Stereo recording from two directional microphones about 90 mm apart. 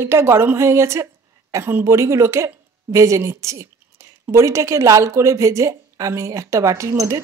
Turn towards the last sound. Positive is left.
turn(degrees=-35)  # may be behind; listen again after turning